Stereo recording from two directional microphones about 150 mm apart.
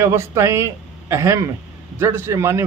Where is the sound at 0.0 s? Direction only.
20° right (ahead or behind).